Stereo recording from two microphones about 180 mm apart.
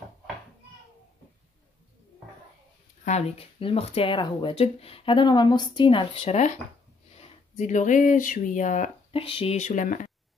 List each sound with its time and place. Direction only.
3.1 s speech: 35° left (ahead or behind)
9.2 s speech: 30° left (ahead or behind)